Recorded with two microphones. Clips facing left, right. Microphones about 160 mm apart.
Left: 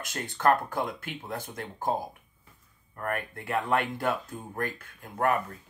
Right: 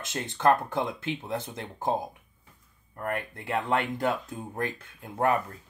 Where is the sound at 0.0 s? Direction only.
25° right (ahead or behind).